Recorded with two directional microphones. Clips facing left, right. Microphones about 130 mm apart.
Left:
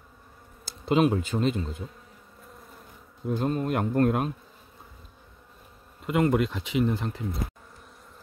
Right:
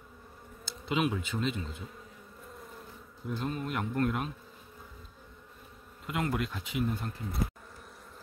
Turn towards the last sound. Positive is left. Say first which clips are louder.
# left 7 dB
turn(degrees=90)